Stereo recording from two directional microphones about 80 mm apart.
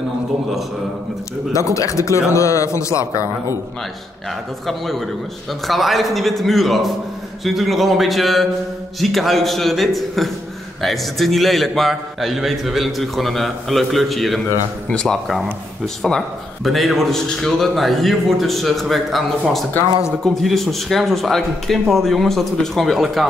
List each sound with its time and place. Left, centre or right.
1.5 s speech: left
4.6 s a man's voice: centre
20.2 s a man's voice: centre